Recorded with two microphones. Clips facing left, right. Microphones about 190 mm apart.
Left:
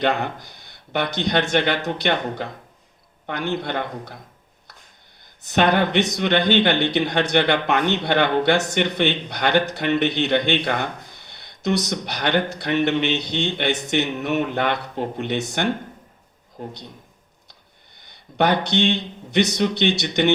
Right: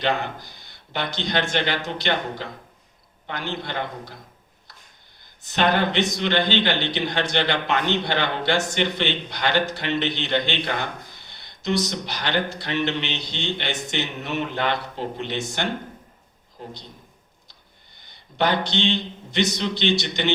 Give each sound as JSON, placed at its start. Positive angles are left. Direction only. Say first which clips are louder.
{"t": 0.0, "sound": "speech", "louder": "left 3 dB", "side_deg": 60}
{"t": 5.4, "sound": "speech", "louder": "left 3 dB", "side_deg": 60}
{"t": 18.3, "sound": "speech", "louder": "left 3 dB", "side_deg": 60}